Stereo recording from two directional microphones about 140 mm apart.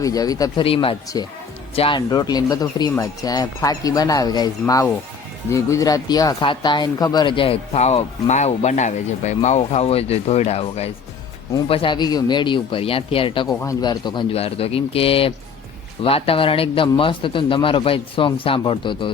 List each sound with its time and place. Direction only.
0.0 s speech: 25° left (ahead or behind)
0.6 s speech: 40° left (ahead or behind)
1.1 s speech: 25° left (ahead or behind)
1.7 s speech: 45° left (ahead or behind)
2.0 s speech: 30° left (ahead or behind); by 10.9 s 50° left (ahead or behind)
11.7 s speech: 35° left (ahead or behind)
13.5 s speech: 20° left (ahead or behind)
14.3 s speech: 45° left (ahead or behind)